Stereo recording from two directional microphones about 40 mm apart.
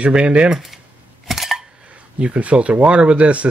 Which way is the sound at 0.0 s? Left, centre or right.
Right.